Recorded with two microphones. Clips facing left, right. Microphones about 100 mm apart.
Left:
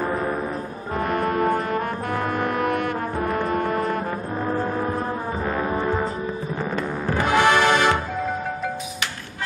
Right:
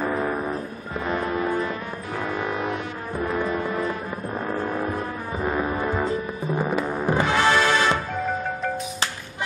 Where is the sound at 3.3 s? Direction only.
50° left (ahead or behind).